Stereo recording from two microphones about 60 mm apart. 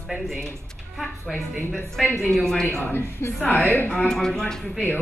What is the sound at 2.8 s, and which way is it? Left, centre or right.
Speech, left.